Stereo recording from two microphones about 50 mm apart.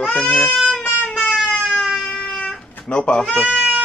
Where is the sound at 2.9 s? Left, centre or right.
Centre.